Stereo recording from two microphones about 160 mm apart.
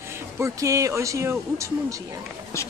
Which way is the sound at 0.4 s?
20° right (ahead or behind).